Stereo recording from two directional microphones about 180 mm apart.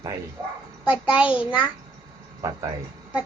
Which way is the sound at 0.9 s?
5° right (ahead or behind).